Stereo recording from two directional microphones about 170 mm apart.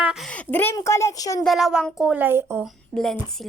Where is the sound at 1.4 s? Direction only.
Centre (ahead or behind).